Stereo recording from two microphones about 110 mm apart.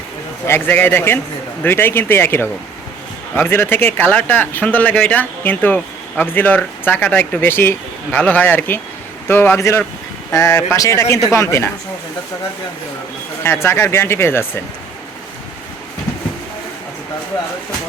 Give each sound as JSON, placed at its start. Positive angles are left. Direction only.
{"t": 0.4, "sound": "speech", "side_deg": 20}
{"t": 13.4, "sound": "speech", "side_deg": 20}